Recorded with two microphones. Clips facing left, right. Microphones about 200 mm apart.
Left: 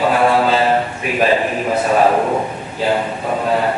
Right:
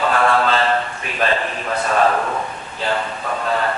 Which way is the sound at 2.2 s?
25° left (ahead or behind).